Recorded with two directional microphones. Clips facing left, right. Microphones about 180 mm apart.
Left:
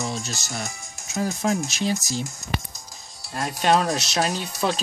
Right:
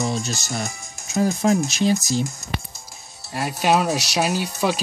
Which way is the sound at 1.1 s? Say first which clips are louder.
Right 5 dB; 30° right (ahead or behind).